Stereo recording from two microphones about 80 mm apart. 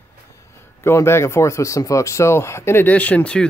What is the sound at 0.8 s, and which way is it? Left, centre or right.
Speech, left.